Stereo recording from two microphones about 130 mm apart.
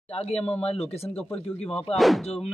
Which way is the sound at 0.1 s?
50° left (ahead or behind).